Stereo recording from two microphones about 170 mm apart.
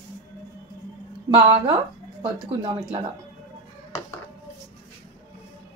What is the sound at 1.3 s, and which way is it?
Speech, 25° right (ahead or behind).